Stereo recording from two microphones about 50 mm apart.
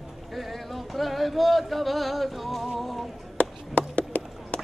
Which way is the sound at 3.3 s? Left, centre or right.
Left.